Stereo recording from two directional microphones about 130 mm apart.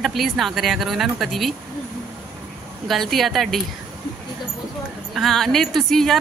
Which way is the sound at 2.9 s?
Centre (ahead or behind).